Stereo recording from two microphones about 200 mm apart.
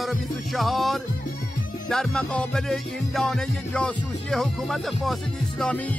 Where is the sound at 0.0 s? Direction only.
Centre (ahead or behind).